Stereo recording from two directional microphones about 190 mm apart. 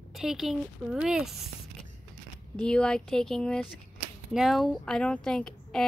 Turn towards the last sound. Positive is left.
turn(degrees=5)  # may be behind; listen again after turning